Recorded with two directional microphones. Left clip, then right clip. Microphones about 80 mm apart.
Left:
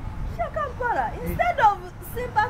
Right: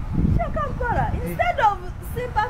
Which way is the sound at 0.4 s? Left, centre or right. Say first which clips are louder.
Left 2 dB; centre.